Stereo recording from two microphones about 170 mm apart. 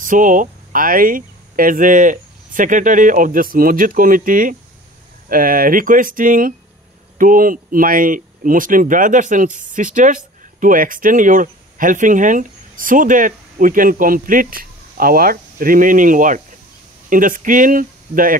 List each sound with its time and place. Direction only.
0.0 s speech: 50° right (ahead or behind)